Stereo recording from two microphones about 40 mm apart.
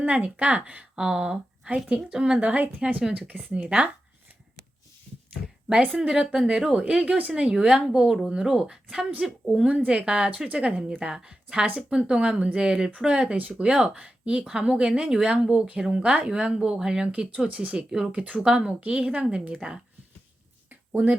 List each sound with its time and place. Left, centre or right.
0.0 s a woman's voice: right
0.9 s a woman's voice: right
6.0 s a woman's voice: centre
6.7 s a woman's voice: right
7.5 s a woman's voice: centre
9.2 s a woman's voice: centre
9.6 s a woman's voice: right
11.1 s a woman's voice: centre
17.1 s a woman's voice: right
17.7 s a woman's voice: centre
18.2 s speech: right
20.7 s a sound: right